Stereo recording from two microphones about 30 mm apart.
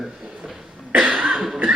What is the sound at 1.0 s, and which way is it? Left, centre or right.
Cough, right.